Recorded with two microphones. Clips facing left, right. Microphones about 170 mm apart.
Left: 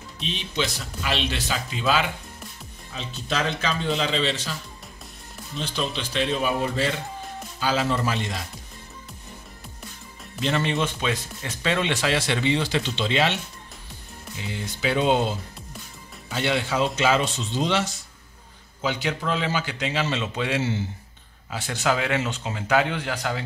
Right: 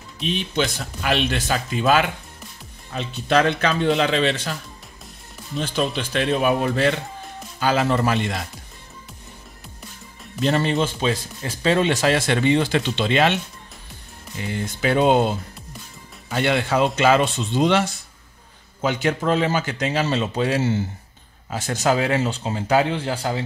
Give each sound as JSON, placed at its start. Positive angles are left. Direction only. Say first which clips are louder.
{"t": 0.2, "sound": "speech", "louder": "right 5 dB", "side_deg": -55}
{"t": 5.6, "sound": "speech", "louder": "right 5 dB", "side_deg": -50}
{"t": 10.4, "sound": "speech", "louder": "right 4 dB", "side_deg": -40}
{"t": 14.4, "sound": "a man's voice", "louder": "right 4 dB", "side_deg": -50}